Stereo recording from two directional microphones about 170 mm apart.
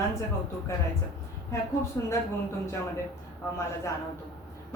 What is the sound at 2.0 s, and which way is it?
Speech, 20° left (ahead or behind).